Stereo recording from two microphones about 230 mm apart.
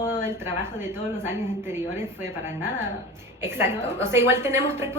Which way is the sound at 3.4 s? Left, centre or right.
Centre.